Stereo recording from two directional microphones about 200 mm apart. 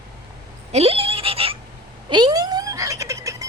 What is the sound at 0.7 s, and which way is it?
Goat, 30° right (ahead or behind).